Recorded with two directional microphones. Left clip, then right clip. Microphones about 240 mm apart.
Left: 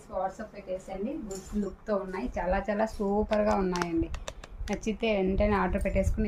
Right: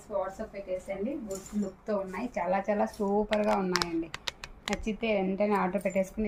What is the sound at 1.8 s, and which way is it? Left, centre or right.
A woman's voice, centre.